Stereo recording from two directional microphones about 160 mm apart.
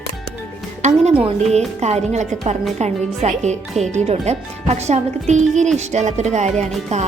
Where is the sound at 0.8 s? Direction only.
45° right (ahead or behind).